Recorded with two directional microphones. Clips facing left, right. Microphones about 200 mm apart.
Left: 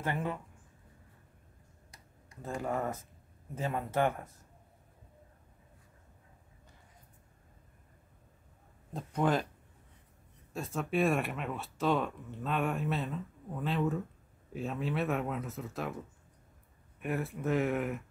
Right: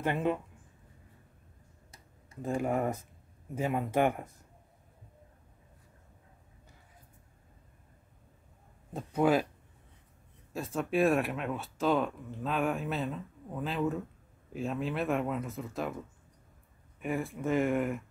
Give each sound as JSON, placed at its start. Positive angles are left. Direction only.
{"t": 0.0, "sound": "speech", "side_deg": -20}
{"t": 2.4, "sound": "speech", "side_deg": -15}
{"t": 8.9, "sound": "speech", "side_deg": -10}
{"t": 10.5, "sound": "speech", "side_deg": 0}
{"t": 17.0, "sound": "speech", "side_deg": 0}